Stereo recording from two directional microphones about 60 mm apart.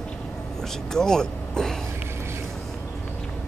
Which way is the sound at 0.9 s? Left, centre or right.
Centre.